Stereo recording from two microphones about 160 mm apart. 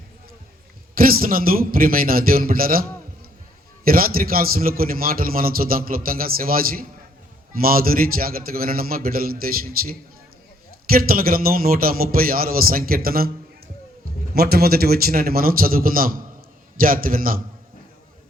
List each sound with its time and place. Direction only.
0.9 s a man's voice: 65° right (ahead or behind)
3.8 s a man's voice: 65° right (ahead or behind)
14.3 s a man's voice: 75° right (ahead or behind)